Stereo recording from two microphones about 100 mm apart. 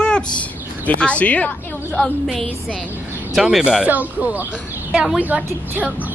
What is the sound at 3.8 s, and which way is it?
Speech, 15° right (ahead or behind).